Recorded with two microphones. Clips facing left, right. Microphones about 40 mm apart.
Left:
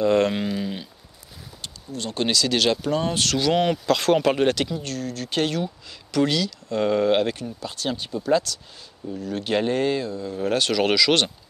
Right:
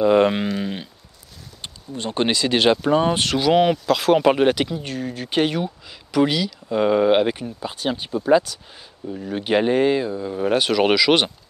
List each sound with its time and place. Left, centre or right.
0.0 s speech: centre
3.7 s speech: centre